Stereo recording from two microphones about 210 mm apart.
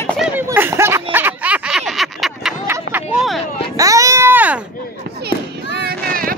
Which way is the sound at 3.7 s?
15° right (ahead or behind).